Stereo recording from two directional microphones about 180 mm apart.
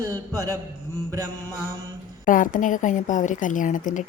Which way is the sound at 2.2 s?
45° left (ahead or behind).